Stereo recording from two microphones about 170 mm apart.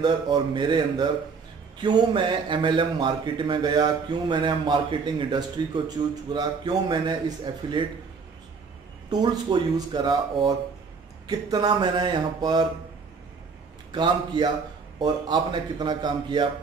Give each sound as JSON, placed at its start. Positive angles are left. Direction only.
{"t": 0.0, "sound": "a man's voice", "side_deg": -25}
{"t": 9.1, "sound": "a man's voice", "side_deg": -25}
{"t": 13.9, "sound": "a man's voice", "side_deg": -25}